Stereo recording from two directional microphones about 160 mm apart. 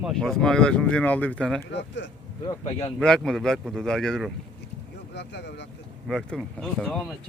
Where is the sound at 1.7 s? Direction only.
90° left.